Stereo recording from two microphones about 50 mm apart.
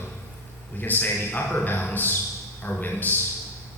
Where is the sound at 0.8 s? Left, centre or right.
Left.